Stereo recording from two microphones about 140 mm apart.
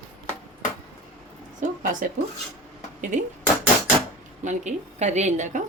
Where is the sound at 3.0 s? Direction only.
60° right (ahead or behind).